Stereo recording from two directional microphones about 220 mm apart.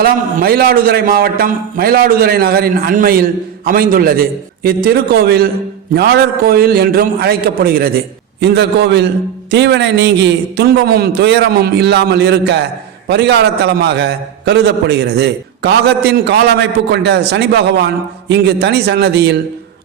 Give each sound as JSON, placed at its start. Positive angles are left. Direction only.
{"t": 0.0, "sound": "a man's voice", "side_deg": -40}